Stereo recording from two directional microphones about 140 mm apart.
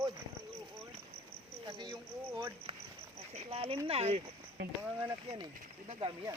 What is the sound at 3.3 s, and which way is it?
Speech, 45° right (ahead or behind).